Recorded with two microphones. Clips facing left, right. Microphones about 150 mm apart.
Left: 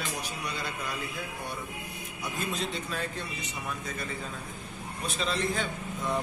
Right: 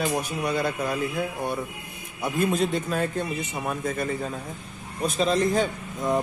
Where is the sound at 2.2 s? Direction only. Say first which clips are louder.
Right 10 dB; 50° right (ahead or behind).